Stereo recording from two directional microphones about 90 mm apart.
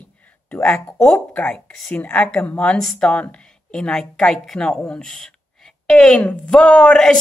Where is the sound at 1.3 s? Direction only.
15° left (ahead or behind).